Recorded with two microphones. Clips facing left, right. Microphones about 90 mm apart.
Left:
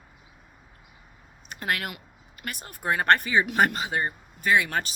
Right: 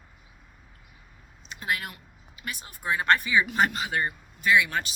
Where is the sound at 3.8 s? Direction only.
30° left (ahead or behind).